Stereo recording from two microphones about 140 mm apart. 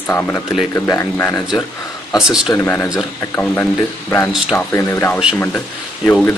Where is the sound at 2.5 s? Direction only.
15° left (ahead or behind).